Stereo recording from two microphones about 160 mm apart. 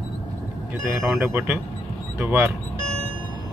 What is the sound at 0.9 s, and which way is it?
Speech, 10° right (ahead or behind).